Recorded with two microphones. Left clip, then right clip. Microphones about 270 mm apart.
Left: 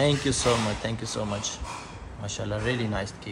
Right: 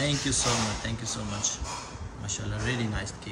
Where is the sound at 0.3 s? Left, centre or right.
Centre.